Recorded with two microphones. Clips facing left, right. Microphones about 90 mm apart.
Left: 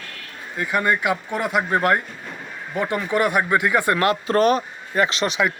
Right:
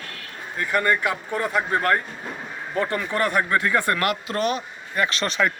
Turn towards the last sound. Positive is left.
turn(degrees=15)  # may be behind; listen again after turning